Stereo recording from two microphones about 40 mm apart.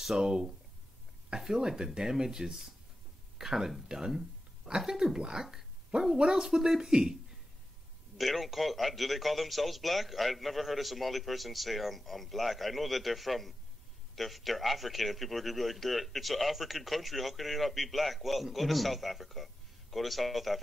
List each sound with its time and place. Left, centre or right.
0.0 s speech: centre
8.2 s speech: centre